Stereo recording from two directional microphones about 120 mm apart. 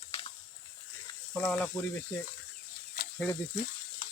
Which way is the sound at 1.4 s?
10° left (ahead or behind).